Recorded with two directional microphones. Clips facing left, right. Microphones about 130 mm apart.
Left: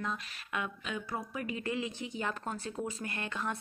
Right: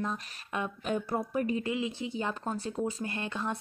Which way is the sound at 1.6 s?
20° right (ahead or behind).